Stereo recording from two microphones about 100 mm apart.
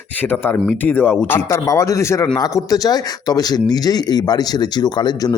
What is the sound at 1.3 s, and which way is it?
A man's voice, 30° left (ahead or behind).